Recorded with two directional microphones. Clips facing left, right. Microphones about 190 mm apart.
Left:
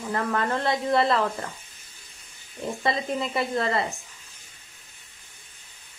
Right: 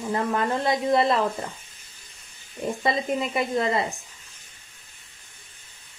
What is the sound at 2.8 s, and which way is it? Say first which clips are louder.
Speech: right 1 dB; 20° right (ahead or behind).